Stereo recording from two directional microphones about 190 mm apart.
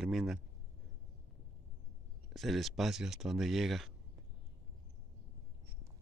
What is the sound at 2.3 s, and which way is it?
Speech, centre (ahead or behind).